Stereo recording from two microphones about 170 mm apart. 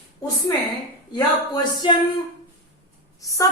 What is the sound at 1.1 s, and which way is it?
Speech, 25° left (ahead or behind).